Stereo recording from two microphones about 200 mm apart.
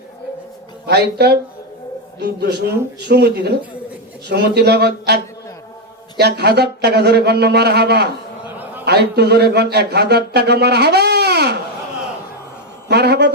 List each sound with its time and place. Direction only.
0.9 s speech: 55° right (ahead or behind)
8.4 s a sound: 10° right (ahead or behind)
8.8 s speech: 55° right (ahead or behind)
12.9 s speech: 55° right (ahead or behind)